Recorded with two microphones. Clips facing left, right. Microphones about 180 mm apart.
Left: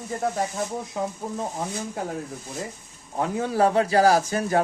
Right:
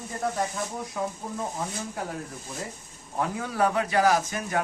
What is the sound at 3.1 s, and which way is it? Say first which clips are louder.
Speech: left 5 dB; 25° left (ahead or behind).